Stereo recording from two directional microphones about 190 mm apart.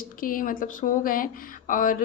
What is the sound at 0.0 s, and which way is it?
Speech, 45° left (ahead or behind).